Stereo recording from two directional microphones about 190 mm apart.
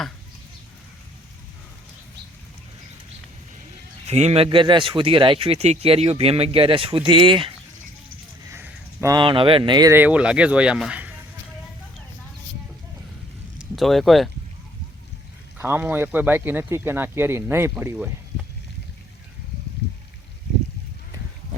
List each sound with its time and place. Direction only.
4.0 s speech: 35° right (ahead or behind)
8.5 s speech: 10° right (ahead or behind)
13.6 s speech: centre (ahead or behind)
15.5 s speech: 10° right (ahead or behind)